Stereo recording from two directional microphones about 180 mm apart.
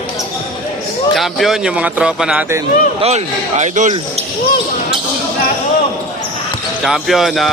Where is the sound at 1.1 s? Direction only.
Centre (ahead or behind).